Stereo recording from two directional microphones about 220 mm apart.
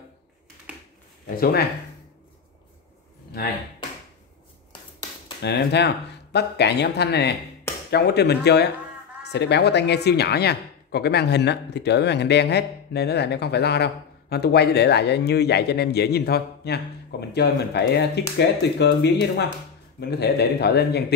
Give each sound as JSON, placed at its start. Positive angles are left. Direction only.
{"t": 1.3, "sound": "speech", "side_deg": 40}
{"t": 5.4, "sound": "speech", "side_deg": 50}